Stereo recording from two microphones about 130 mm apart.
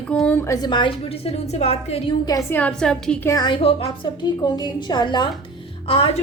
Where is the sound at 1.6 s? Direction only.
50° left (ahead or behind).